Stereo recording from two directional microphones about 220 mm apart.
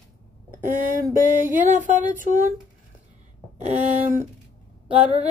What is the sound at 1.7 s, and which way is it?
Speech, 35° right (ahead or behind).